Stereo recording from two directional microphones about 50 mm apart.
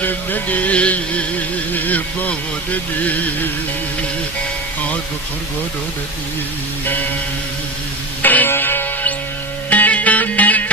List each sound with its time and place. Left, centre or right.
0.0 s a sound: left
8.2 s music: left
9.6 s music: left